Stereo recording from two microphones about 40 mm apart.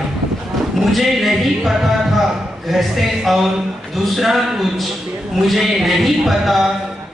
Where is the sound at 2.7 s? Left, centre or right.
Centre.